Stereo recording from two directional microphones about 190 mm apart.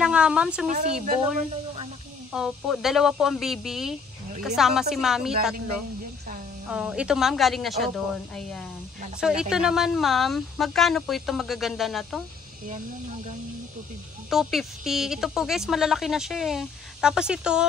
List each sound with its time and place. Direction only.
0.0 s speech: 5° right (ahead or behind)
0.7 s speech: 40° right (ahead or behind)
2.3 s speech: centre (ahead or behind)
6.7 s speech: 5° right (ahead or behind)
14.3 s speech: centre (ahead or behind)